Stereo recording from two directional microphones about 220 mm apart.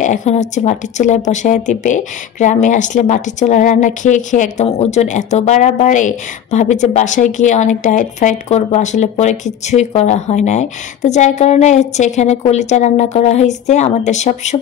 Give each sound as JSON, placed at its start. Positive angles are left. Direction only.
{"t": 0.0, "sound": "speech", "side_deg": 35}